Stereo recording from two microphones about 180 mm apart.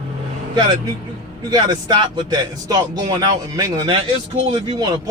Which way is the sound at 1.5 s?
25° right (ahead or behind).